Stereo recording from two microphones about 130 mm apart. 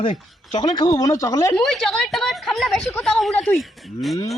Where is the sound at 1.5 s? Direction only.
5° left (ahead or behind).